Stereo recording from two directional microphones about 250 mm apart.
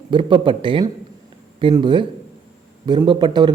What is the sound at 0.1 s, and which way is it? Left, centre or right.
A woman's voice, centre.